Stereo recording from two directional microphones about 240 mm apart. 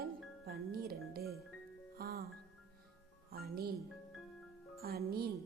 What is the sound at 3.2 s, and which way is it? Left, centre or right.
Speech, right.